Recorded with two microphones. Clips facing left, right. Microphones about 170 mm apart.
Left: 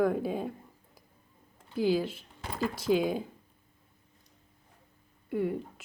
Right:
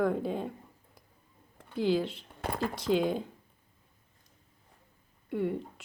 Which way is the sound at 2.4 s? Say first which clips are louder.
Even; 55° right (ahead or behind).